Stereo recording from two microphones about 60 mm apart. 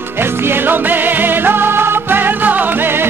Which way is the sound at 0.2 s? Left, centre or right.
Right.